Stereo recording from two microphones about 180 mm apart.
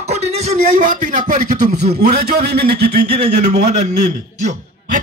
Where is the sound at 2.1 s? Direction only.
65° right (ahead or behind).